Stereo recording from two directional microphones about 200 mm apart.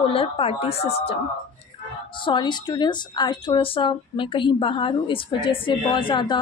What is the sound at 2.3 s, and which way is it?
A woman's voice, 20° left (ahead or behind).